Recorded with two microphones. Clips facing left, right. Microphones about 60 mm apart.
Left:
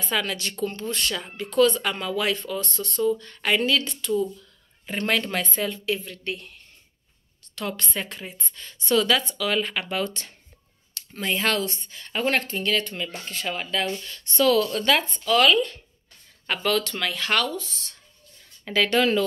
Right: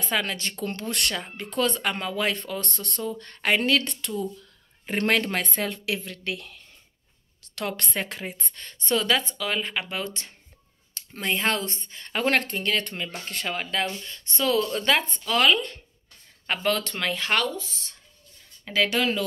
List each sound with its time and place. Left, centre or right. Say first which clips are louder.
0.1 s speech: left 1 dB; right
0.7 s speech: even; right
1.1 s speech: left 6 dB; right
2.3 s speech: left 3 dB; right
3.0 s speech: left 8 dB; right
6.0 s speech: even; right
7.5 s speech: even; right
8.8 s speech: left 3 dB; right
11.0 s a sound: left 1 dB; right
11.6 s speech: left 3 dB; right
14.0 s speech: left 5 dB; right
15.2 s speech: left 3 dB; right
16.4 s speech: left 1 dB; right
18.7 s speech: left 3 dB; centre